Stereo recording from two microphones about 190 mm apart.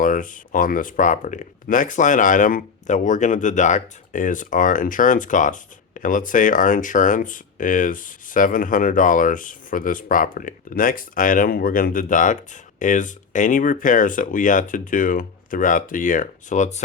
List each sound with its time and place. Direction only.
0.0 s speech: 45° left (ahead or behind)